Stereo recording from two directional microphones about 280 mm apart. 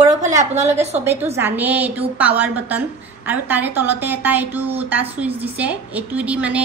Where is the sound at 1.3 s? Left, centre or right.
Centre.